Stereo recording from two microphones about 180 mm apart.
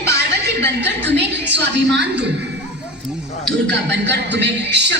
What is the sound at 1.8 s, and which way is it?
Speech, centre (ahead or behind).